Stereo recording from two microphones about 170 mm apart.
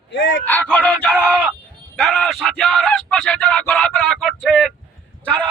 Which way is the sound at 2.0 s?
Centre (ahead or behind).